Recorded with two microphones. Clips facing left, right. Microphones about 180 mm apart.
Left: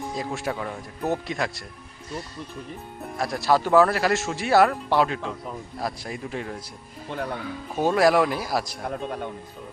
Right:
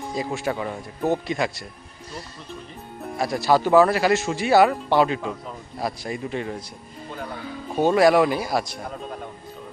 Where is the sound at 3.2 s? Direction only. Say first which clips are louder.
Right 2 dB; centre (ahead or behind).